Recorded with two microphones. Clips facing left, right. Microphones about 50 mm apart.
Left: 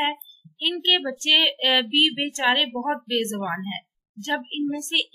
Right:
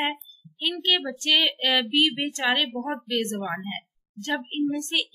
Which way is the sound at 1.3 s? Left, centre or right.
Left.